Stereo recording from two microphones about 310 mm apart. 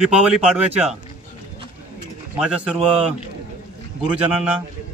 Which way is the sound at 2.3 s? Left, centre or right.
Centre.